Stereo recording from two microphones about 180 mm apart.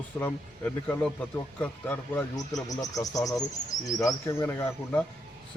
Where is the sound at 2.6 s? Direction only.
20° left (ahead or behind).